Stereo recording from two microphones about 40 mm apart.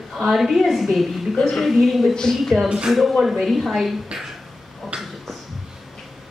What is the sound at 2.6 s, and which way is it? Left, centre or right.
Speech, right.